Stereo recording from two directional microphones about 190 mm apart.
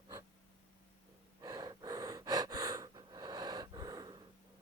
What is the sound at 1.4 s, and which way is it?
Gasp, 20° right (ahead or behind).